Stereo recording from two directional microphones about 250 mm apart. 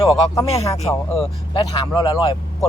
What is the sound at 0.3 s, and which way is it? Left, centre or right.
Speech, centre.